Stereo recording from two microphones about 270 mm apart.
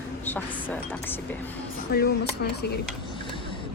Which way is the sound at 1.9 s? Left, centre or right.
Left.